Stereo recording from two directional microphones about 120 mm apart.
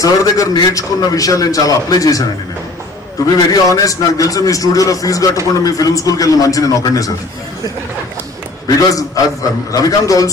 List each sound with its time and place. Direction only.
0.0 s a man's voice: 30° left (ahead or behind)
3.3 s a man's voice: 30° left (ahead or behind)
8.6 s a man's voice: 30° left (ahead or behind)